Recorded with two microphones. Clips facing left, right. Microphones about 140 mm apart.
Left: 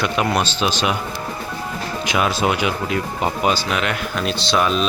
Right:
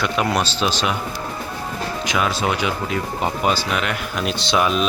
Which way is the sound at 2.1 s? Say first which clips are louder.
Left 2 dB; 20° left (ahead or behind).